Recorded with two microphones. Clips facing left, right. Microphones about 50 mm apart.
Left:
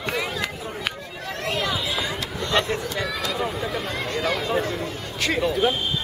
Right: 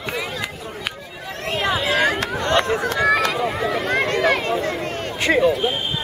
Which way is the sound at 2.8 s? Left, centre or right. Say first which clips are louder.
Right 9 dB; right.